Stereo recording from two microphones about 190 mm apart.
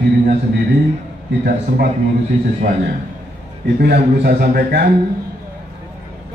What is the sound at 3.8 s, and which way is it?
A man's voice, 55° right (ahead or behind).